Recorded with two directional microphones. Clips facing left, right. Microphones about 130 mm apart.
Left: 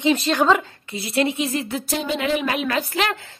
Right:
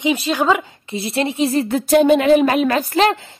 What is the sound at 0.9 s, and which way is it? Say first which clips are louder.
Speech: right 1 dB; 25° right (ahead or behind).